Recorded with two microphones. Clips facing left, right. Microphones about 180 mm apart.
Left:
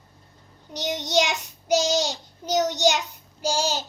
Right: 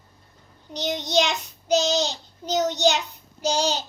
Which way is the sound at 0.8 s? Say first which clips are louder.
Right 1 dB; 15° left (ahead or behind).